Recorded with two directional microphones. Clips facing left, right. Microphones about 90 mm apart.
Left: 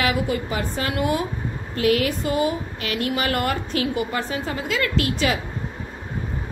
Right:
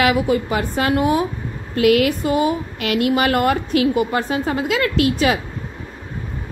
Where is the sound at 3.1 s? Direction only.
40° right (ahead or behind).